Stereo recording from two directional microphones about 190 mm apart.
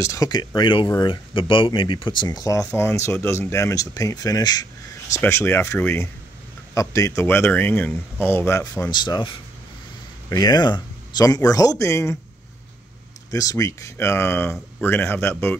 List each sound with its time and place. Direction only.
0.0 s speech: 15° left (ahead or behind)
8.9 s speech: 25° left (ahead or behind)
13.3 s speech: 20° left (ahead or behind)